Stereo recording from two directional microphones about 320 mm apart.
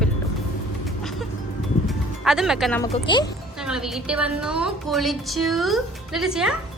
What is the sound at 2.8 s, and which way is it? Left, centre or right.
Speech, centre.